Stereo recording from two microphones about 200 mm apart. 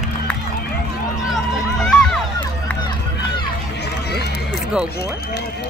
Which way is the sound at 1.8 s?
5° left (ahead or behind).